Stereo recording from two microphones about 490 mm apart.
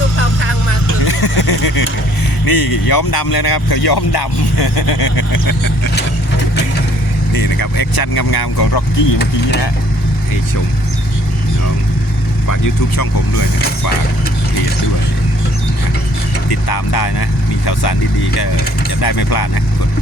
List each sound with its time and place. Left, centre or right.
0.2 s vehicle: left
1.0 s a sound: left
2.4 s speech: left
7.3 s speech: left
12.5 s speech: left
16.5 s speech: left
18.9 s speech: left